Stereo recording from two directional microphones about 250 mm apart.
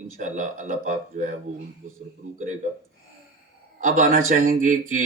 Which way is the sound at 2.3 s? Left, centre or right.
Right.